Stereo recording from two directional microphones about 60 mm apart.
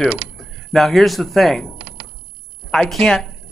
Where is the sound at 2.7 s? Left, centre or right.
Centre.